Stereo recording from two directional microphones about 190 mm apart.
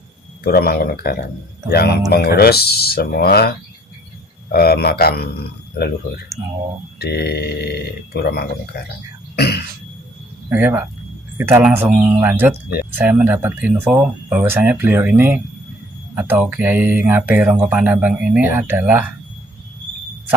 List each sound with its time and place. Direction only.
0.4 s speech: 55° left (ahead or behind)
4.5 s speech: 55° left (ahead or behind)
9.3 s throat clearing: 60° left (ahead or behind)
10.5 s speech: 10° right (ahead or behind)